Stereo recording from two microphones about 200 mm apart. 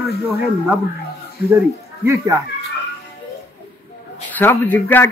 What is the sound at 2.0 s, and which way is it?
Speech, 15° right (ahead or behind).